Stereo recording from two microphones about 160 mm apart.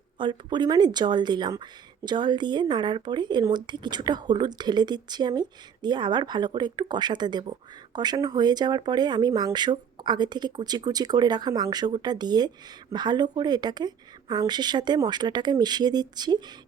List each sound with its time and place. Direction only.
0.2 s speech: 30° right (ahead or behind)